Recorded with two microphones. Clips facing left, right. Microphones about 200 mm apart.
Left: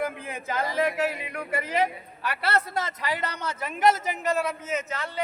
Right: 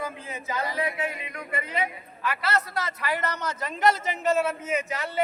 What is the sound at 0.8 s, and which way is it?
Speech, 75° left (ahead or behind).